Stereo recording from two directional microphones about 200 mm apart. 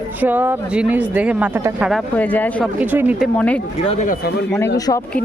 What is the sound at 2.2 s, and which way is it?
Speech, 10° left (ahead or behind).